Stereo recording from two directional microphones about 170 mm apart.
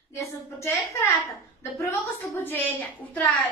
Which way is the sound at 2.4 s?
10° left (ahead or behind).